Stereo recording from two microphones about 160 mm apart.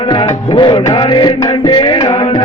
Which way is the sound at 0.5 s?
25° left (ahead or behind).